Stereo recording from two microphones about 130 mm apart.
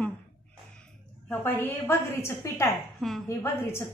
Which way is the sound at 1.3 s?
15° left (ahead or behind).